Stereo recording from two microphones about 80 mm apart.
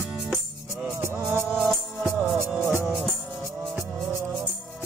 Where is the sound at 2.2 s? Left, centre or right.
Right.